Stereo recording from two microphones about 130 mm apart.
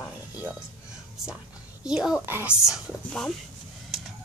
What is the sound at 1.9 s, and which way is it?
Speech, 5° right (ahead or behind).